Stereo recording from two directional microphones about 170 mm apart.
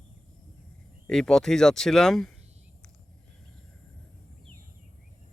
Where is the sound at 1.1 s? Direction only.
5° left (ahead or behind).